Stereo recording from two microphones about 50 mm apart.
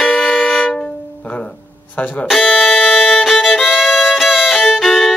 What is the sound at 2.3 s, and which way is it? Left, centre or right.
Music, centre.